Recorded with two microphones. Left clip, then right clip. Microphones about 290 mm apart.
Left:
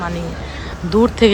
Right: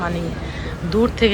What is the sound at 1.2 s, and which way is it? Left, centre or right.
Speech, centre.